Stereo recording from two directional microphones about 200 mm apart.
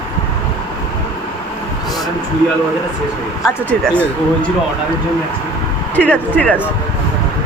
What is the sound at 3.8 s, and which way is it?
Speech, 5° left (ahead or behind).